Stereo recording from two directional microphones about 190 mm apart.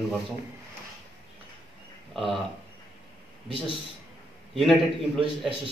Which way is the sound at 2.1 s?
Centre (ahead or behind).